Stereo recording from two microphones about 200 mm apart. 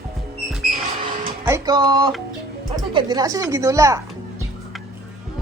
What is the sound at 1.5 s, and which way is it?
Speech, 20° right (ahead or behind).